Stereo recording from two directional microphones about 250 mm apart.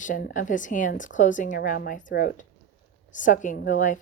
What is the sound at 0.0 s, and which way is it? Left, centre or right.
A woman's voice, left.